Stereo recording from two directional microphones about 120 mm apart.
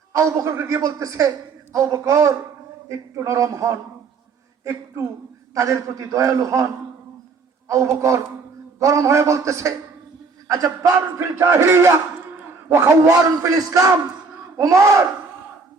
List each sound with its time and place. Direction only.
0.1 s a man's voice: 25° right (ahead or behind)
7.7 s a man's voice: 25° right (ahead or behind)